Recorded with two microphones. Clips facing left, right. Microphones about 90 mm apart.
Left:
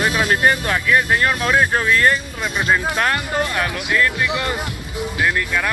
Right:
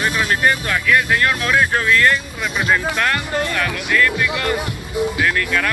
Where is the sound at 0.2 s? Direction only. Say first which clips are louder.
Even; 30° left (ahead or behind).